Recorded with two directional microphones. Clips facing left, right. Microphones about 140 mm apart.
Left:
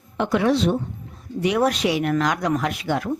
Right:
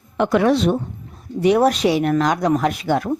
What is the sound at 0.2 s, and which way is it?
Speech, 55° right (ahead or behind).